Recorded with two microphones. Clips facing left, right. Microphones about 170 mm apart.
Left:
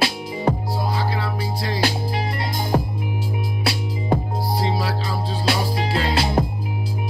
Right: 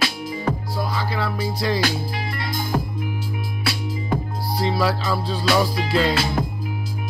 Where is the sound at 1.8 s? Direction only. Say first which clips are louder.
Left 2 dB; 35° left (ahead or behind).